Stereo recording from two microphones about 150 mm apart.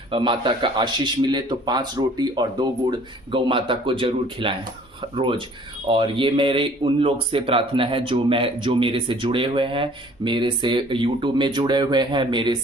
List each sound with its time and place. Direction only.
0.1 s speech: 35° right (ahead or behind)